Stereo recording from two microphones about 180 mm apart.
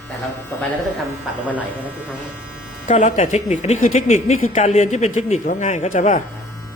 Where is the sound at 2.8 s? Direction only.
40° left (ahead or behind).